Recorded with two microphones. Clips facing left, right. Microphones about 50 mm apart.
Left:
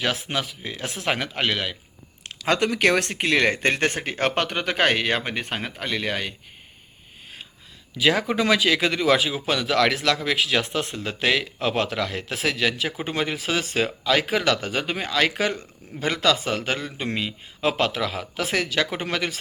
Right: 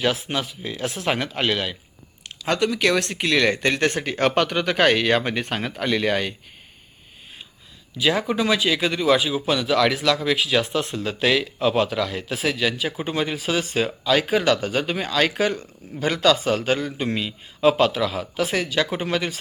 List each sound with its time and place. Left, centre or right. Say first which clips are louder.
0.3 s speech: right 1 dB; left
2.5 s speech: even; left; by 6.3 s centre
8.4 s speech: left 1 dB; left
13.0 s speech: right 1 dB; left